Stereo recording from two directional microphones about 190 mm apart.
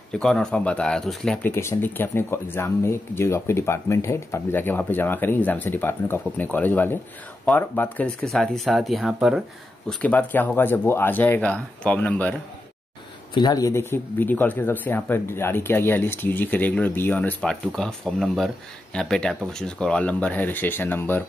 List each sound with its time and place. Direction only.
0.1 s speech: 5° left (ahead or behind)
1.5 s speech: 15° left (ahead or behind); by 9.4 s 5° right (ahead or behind)
9.8 s speech: 10° left (ahead or behind)
13.3 s speech: 20° left (ahead or behind)